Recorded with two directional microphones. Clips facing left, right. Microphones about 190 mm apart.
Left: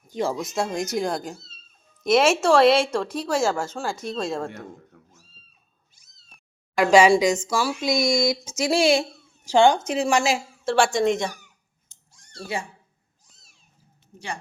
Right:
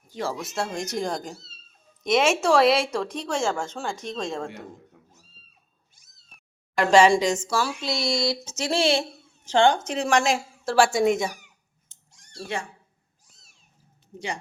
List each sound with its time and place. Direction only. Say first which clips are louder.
0.1 s speech: left 4 dB; 15° left (ahead or behind)
0.9 s speech: left 1 dB; 5° left (ahead or behind)
4.4 s cat: left 2 dB; 15° right (ahead or behind)
6.7 s speech: left 2 dB; 10° left (ahead or behind)
12.1 s a sound: even; 20° right (ahead or behind)